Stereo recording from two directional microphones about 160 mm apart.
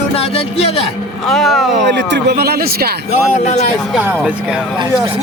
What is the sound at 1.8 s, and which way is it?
A man's voice, 90° right.